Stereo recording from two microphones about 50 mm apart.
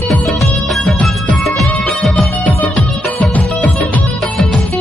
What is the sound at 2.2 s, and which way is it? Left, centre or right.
Music, left.